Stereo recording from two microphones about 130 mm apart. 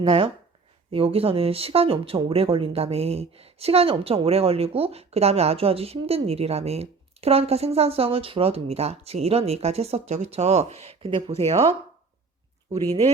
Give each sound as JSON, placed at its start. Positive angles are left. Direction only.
{"t": 0.0, "sound": "speech", "side_deg": -45}